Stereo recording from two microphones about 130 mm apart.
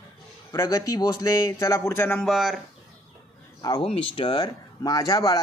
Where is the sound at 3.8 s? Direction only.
40° left (ahead or behind); by 5.4 s 25° left (ahead or behind).